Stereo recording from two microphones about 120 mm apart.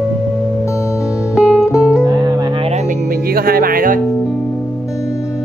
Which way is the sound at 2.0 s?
35° right (ahead or behind).